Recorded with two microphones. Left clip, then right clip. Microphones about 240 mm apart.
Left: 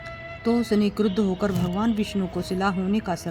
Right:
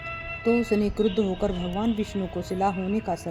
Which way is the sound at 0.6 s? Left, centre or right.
Left.